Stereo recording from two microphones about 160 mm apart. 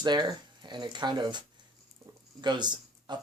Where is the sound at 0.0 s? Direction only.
25° right (ahead or behind).